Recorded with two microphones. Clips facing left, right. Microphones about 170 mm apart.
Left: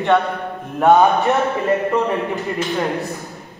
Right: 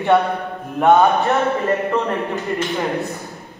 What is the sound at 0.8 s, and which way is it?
Speech, centre (ahead or behind).